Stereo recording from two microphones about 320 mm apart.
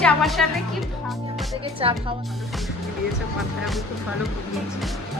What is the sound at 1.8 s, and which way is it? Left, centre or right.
Speech, centre.